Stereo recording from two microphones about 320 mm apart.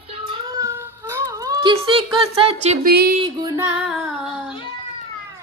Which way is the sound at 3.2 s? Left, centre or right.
Centre.